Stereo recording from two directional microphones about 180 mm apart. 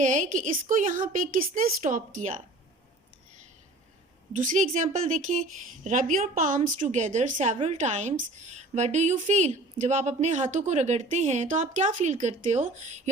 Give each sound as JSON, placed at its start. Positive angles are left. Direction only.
{"t": 0.0, "sound": "a woman's voice", "side_deg": -45}
{"t": 4.4, "sound": "a woman's voice", "side_deg": -45}